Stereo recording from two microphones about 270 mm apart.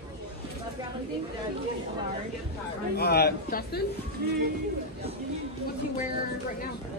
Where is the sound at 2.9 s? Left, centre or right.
Left.